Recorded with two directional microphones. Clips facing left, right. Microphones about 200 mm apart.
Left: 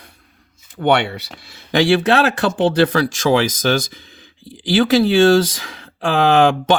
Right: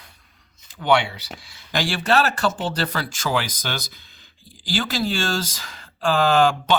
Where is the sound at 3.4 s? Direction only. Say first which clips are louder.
Left 13 dB; 45° left (ahead or behind).